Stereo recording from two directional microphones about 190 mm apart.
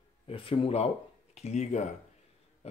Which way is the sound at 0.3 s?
30° left (ahead or behind).